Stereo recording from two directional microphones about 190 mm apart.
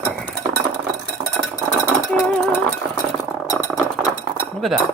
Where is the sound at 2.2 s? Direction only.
Centre (ahead or behind).